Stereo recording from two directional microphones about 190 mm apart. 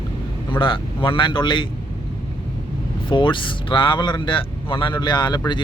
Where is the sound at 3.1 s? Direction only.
25° left (ahead or behind).